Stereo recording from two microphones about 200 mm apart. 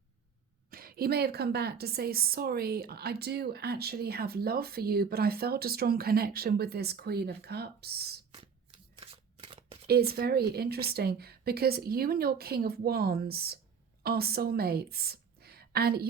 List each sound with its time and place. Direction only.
0.7 s a woman's voice: 45° right (ahead or behind)
9.0 s shuffling cards: 25° right (ahead or behind)
9.8 s a woman's voice: 50° right (ahead or behind)